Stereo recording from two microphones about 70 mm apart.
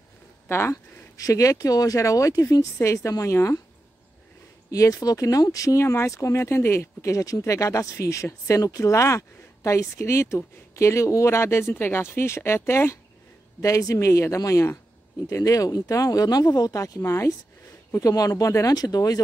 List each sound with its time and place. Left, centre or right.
0.5 s speech: left
1.1 s speech: left
4.6 s speech: left
5.8 s speech: left
13.6 s speech: left
17.9 s speech: left